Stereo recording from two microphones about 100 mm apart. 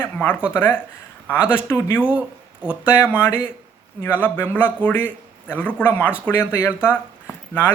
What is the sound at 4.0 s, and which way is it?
Speech, 15° left (ahead or behind).